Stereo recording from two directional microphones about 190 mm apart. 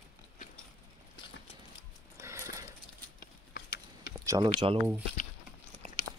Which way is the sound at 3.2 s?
60° left (ahead or behind).